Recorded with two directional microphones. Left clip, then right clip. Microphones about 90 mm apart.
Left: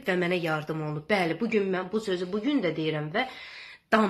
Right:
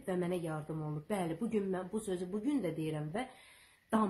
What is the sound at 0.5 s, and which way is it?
Cough, 5° left (ahead or behind).